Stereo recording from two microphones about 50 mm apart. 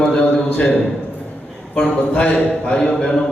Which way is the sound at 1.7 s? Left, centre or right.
Left.